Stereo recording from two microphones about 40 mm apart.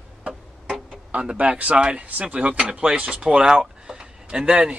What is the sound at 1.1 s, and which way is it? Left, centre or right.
Speech, right.